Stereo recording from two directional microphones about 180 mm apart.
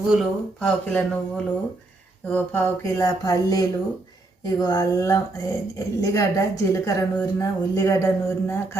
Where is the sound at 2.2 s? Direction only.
10° left (ahead or behind).